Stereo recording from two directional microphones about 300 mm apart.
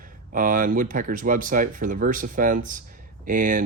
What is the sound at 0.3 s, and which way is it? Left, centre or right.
Speech, right.